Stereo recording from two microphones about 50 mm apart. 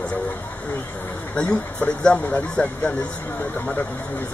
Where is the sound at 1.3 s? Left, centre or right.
Left.